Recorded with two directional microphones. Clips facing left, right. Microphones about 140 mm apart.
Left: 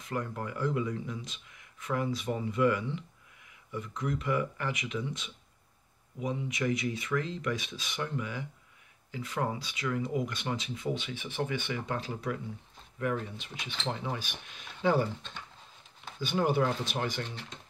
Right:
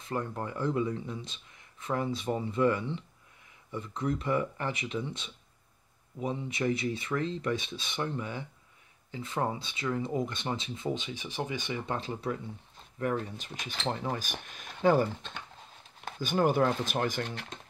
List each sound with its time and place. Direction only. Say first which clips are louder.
0.0 s speech: right 1 dB; 30° right (ahead or behind)
11.8 s speech: right 1 dB; 30° right (ahead or behind)
13.0 s speech: right 1 dB; 40° right (ahead or behind)